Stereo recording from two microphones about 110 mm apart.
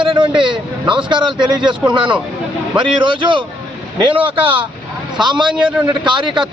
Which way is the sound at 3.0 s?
45° right (ahead or behind).